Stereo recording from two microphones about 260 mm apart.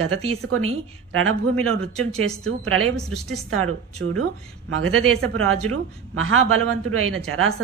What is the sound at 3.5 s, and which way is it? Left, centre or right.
A woman's voice, right.